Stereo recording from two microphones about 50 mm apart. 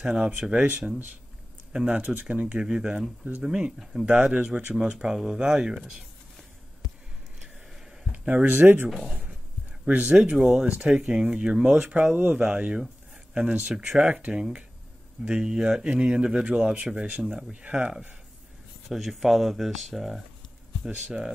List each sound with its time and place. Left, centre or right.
0.0 s speech: centre
1.7 s speech: right
2.6 s speech: centre
8.1 s a sound: right
8.5 s speech: right
8.9 s speech: centre
9.8 s speech: right
10.3 s speech: centre
10.7 s speech: right
14.3 s speech: centre
18.9 s speech: centre